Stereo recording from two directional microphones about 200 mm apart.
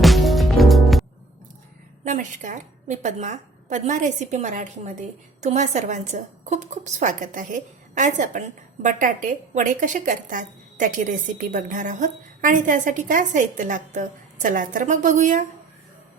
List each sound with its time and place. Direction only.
0.0 s music: centre (ahead or behind)
2.0 s a woman's voice: 40° right (ahead or behind)